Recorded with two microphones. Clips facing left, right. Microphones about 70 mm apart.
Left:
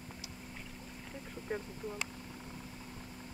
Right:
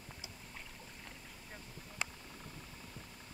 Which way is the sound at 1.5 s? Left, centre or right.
Left.